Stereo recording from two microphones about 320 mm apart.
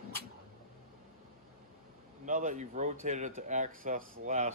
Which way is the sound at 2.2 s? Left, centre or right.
Right.